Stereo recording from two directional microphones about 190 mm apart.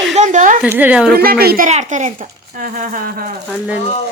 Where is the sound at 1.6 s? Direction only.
40° right (ahead or behind).